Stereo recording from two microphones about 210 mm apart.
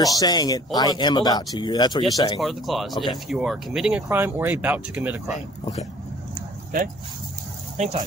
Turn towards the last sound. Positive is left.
turn(degrees=-30)  # may be behind; listen again after turning